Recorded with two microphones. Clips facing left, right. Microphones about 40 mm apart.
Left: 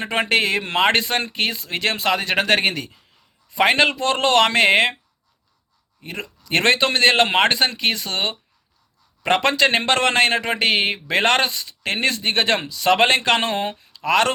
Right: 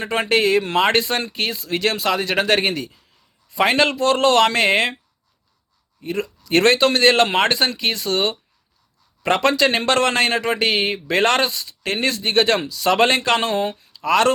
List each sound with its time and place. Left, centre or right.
0.0 s a man's voice: left
6.0 s a man's voice: left